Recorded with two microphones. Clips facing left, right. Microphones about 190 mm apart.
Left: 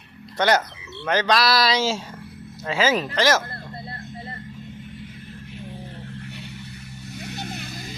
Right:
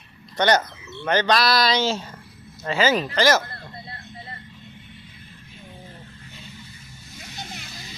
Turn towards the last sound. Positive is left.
turn(degrees=50)  # may be behind; listen again after turning